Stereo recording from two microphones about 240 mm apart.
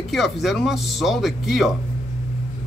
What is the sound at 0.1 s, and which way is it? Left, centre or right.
Speech, centre.